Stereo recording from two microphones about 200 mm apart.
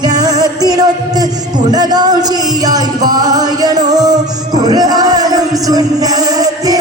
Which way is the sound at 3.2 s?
20° right (ahead or behind).